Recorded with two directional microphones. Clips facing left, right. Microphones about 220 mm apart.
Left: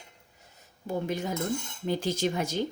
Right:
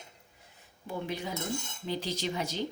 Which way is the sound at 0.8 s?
45° left (ahead or behind).